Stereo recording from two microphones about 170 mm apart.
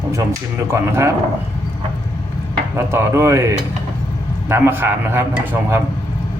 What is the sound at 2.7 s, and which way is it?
A man's voice, 15° right (ahead or behind).